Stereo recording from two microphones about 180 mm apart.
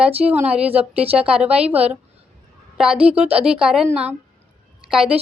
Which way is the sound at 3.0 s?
35° right (ahead or behind).